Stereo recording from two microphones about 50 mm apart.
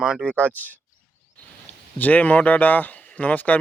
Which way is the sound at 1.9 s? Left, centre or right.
Left.